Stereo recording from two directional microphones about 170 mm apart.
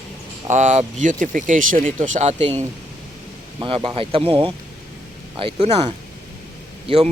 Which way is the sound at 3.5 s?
30° right (ahead or behind).